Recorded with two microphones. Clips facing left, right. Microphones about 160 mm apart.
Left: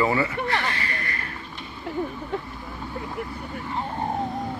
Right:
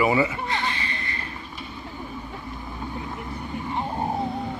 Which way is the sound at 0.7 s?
20° right (ahead or behind).